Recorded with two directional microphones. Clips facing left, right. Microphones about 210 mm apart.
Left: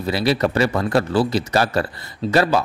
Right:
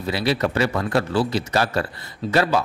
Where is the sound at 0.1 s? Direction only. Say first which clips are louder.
Left 3 dB; 35° left (ahead or behind).